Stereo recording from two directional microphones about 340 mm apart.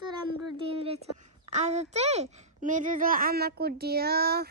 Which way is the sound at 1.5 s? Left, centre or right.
Right.